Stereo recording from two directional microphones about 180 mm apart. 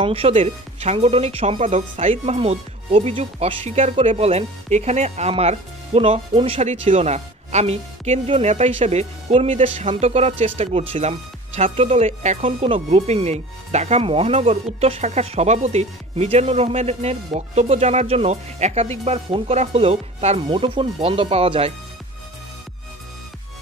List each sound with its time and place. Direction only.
0.0 s speech: 30° right (ahead or behind)